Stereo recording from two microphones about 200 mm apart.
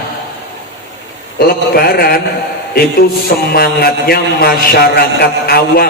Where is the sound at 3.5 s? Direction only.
50° left (ahead or behind).